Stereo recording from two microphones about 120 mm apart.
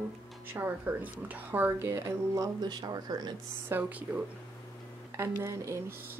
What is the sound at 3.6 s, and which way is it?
A woman's voice, 15° right (ahead or behind).